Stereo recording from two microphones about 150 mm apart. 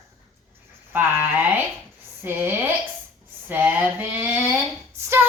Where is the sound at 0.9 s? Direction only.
15° right (ahead or behind).